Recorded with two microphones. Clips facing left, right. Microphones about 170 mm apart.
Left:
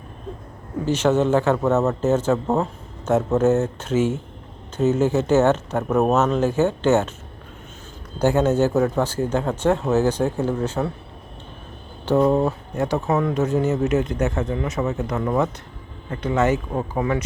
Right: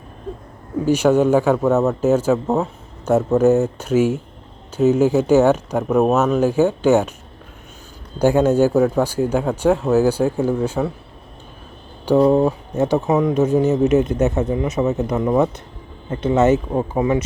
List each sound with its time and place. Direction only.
0.9 s speech: 10° right (ahead or behind)
8.2 s speech: 10° right (ahead or behind)
12.0 s speech: 10° right (ahead or behind)